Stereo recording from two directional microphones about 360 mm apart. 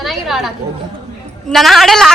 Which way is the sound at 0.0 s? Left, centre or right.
Centre.